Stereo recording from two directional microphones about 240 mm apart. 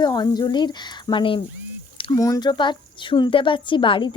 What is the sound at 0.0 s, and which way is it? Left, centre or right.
A woman's voice, centre.